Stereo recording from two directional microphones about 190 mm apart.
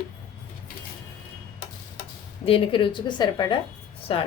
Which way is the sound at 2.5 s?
30° left (ahead or behind).